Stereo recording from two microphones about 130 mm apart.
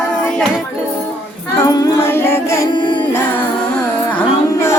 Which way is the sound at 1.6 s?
30° left (ahead or behind).